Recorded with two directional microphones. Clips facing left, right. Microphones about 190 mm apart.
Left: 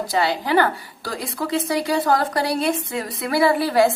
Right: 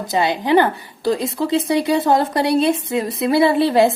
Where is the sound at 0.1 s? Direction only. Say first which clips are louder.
Right 5 dB; 20° right (ahead or behind).